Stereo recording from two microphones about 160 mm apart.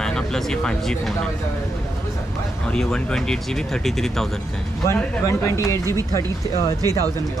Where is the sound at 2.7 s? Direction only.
5° left (ahead or behind).